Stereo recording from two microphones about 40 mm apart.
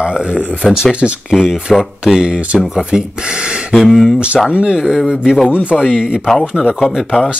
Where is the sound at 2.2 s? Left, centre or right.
Right.